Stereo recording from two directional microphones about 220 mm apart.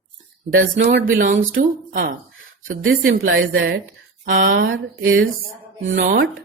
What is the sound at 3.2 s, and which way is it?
Speech, 60° right (ahead or behind).